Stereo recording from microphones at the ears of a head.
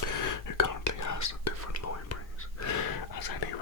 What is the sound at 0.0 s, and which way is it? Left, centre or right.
Whispering, left.